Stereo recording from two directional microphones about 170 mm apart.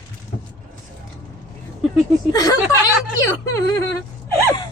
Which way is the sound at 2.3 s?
20° left (ahead or behind).